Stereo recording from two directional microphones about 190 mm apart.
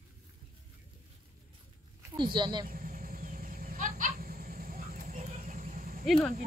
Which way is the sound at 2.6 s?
50° right (ahead or behind).